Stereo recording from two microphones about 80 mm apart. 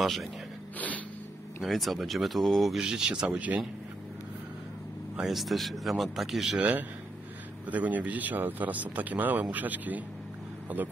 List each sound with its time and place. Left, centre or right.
0.0 s speech: centre
0.7 s music: centre
1.6 s speech: centre
5.1 s speech: centre
7.6 s speech: centre